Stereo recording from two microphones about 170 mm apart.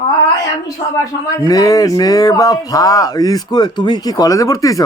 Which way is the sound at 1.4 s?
20° left (ahead or behind).